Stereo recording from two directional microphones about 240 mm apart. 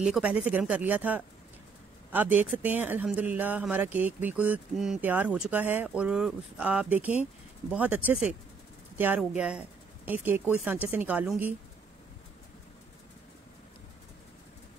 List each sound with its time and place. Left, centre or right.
0.0 s speech: centre